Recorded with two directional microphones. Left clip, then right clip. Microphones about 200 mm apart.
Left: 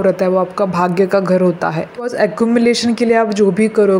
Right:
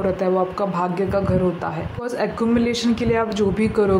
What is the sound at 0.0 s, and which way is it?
Speech, 20° left (ahead or behind).